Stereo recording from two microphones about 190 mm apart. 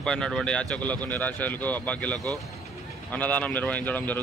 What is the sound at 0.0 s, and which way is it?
Speech, 5° left (ahead or behind).